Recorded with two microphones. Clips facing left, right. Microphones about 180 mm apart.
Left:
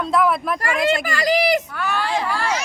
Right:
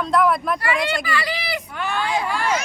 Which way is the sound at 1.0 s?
45° left (ahead or behind).